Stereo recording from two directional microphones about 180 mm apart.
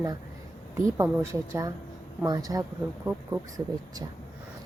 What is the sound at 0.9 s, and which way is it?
A woman's voice, 15° right (ahead or behind).